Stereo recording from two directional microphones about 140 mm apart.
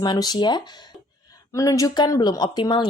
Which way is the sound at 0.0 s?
30° left (ahead or behind).